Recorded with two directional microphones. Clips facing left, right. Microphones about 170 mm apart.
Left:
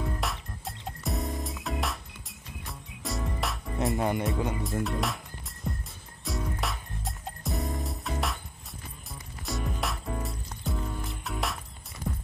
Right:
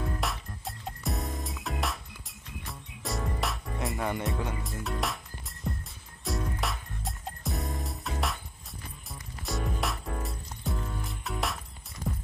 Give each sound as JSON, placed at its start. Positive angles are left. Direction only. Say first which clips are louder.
{"t": 0.2, "sound": "music", "louder": "even", "side_deg": 0}
{"t": 3.9, "sound": "speech", "louder": "left 3 dB", "side_deg": 20}
{"t": 4.8, "sound": "music", "louder": "left 2 dB", "side_deg": 0}